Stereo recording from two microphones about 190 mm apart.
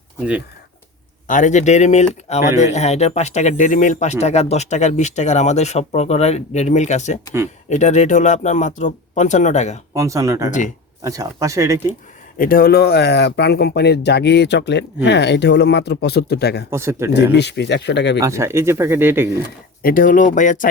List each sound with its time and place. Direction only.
1.3 s speech: 40° left (ahead or behind)
9.9 s speech: 15° right (ahead or behind)
12.4 s speech: 50° left (ahead or behind)
16.6 s speech: 15° right (ahead or behind)
17.3 s speech: 65° left (ahead or behind)
18.2 s speech: 15° right (ahead or behind)
19.8 s speech: 45° left (ahead or behind)